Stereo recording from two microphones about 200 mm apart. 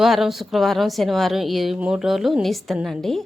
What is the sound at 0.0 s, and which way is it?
Speech, centre (ahead or behind).